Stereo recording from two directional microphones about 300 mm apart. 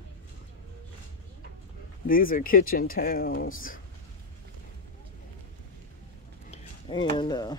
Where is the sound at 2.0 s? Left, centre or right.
Left.